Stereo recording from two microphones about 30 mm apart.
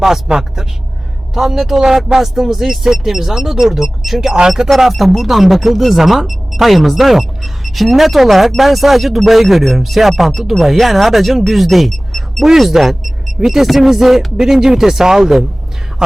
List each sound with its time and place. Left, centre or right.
0.3 s a woman's voice: centre
4.9 s speech: centre
16.0 s speech: right